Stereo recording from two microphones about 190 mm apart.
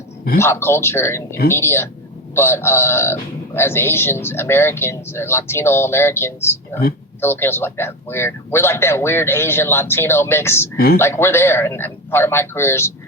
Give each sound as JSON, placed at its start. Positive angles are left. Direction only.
{"t": 0.3, "sound": "a man's voice", "side_deg": 15}